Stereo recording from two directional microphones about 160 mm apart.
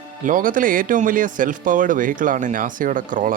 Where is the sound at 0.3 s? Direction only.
60° right (ahead or behind).